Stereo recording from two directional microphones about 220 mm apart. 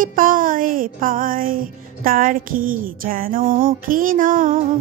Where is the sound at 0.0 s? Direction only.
40° right (ahead or behind).